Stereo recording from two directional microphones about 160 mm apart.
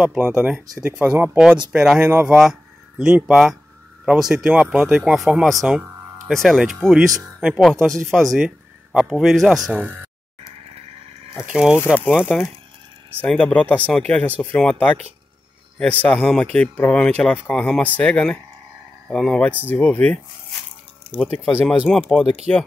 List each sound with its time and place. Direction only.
0.0 s speech: 10° right (ahead or behind)
11.5 s speech: 5° right (ahead or behind)
11.8 s speech: 15° left (ahead or behind)
13.2 s speech: 5° left (ahead or behind)
21.3 s speech: 40° right (ahead or behind)
21.6 s speech: centre (ahead or behind)